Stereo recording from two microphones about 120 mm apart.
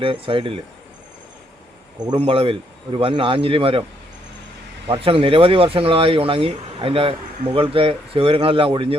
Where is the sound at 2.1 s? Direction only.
50° right (ahead or behind).